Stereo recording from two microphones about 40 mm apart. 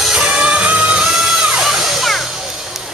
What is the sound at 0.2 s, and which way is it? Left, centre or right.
Music, right.